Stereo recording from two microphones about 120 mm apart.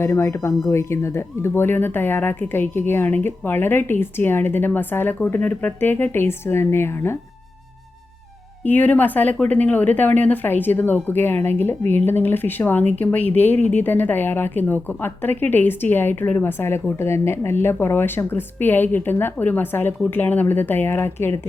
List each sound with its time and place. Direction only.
0.0 s speech: 20° left (ahead or behind)
8.6 s speech: 15° left (ahead or behind)